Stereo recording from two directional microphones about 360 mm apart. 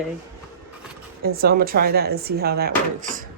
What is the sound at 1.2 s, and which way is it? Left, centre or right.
Speech, right.